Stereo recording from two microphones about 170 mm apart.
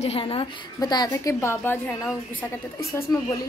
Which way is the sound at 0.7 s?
25° left (ahead or behind).